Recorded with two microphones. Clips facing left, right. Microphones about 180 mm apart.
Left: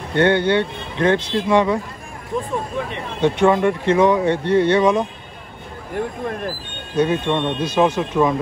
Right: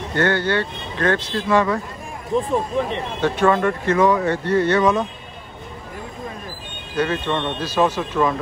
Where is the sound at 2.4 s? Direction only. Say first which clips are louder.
Right 3 dB; 35° right (ahead or behind).